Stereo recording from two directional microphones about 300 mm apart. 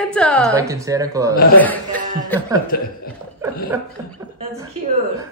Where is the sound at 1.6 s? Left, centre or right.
Centre.